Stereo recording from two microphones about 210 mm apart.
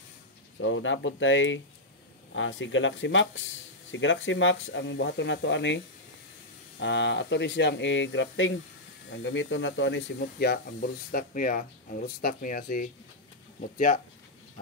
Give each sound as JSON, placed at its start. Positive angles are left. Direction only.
{"t": 0.6, "sound": "speech", "side_deg": 65}
{"t": 6.8, "sound": "speech", "side_deg": 60}
{"t": 11.1, "sound": "speech", "side_deg": 40}